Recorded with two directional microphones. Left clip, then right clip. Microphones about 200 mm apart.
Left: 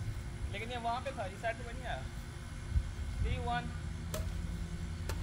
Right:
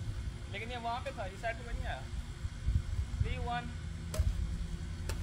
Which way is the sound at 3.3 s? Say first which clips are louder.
Left 1 dB; 10° right (ahead or behind).